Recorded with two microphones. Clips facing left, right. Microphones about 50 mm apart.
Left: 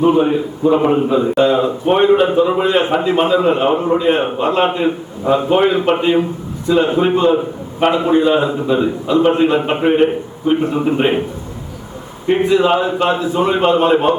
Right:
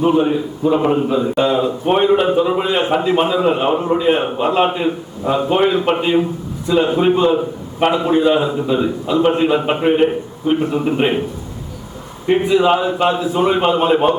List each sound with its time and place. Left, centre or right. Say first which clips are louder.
0.0 s a man's voice: left 2 dB; centre
12.3 s a man's voice: left 1 dB; centre